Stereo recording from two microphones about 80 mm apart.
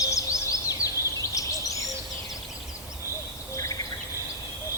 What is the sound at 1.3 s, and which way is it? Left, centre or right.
Bird, left.